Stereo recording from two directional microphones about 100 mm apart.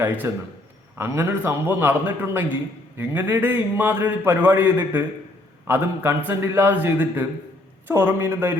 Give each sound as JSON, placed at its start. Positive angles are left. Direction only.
{"t": 0.2, "sound": "a man's voice", "side_deg": -25}